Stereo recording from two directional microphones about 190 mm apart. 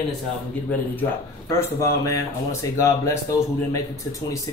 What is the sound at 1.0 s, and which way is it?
Speech, 15° left (ahead or behind).